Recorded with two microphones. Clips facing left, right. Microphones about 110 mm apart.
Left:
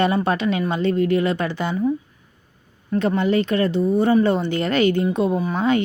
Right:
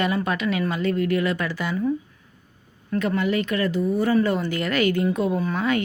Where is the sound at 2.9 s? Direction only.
30° left (ahead or behind).